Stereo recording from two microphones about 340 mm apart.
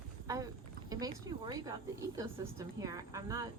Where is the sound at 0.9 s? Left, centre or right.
Centre.